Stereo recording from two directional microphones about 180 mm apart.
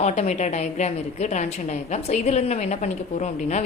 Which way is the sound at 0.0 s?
40° left (ahead or behind).